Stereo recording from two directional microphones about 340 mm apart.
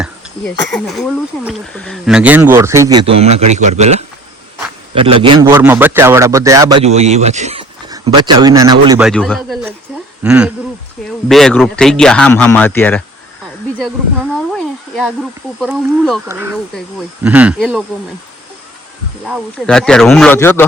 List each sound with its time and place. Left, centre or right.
0.0 s a man's voice: centre
14.5 s speech: centre
19.2 s speech: centre